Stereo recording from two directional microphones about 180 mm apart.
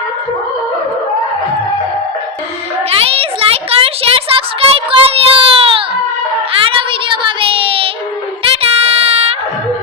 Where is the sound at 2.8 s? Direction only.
30° right (ahead or behind).